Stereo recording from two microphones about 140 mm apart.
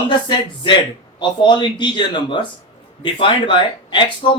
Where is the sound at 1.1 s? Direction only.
35° left (ahead or behind).